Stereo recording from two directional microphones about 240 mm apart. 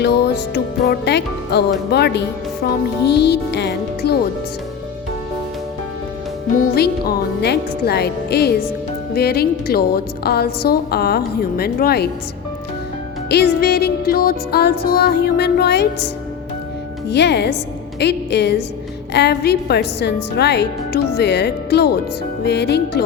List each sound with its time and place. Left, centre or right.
0.0 s music: left
6.7 s music: left
9.1 s a woman's voice: left
13.2 s a woman's voice: left
17.1 s music: left